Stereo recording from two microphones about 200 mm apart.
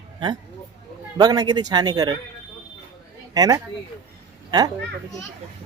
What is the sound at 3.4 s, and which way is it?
Speech, 15° right (ahead or behind).